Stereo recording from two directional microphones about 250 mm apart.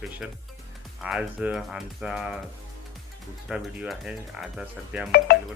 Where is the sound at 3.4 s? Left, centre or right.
Centre.